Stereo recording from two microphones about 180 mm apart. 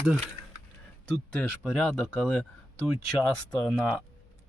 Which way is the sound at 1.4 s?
5° left (ahead or behind).